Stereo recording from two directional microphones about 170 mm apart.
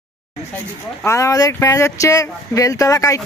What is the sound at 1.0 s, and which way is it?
Speech, 15° left (ahead or behind).